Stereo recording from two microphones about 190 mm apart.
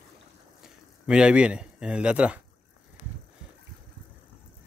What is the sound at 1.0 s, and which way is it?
Speech, 5° right (ahead or behind).